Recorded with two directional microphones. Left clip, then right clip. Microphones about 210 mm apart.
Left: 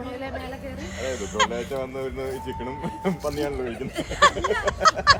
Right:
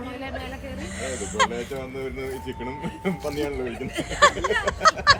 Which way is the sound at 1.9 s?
20° left (ahead or behind).